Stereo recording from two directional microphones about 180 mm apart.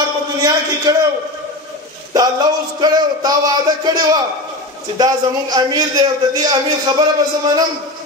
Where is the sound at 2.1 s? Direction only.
20° right (ahead or behind).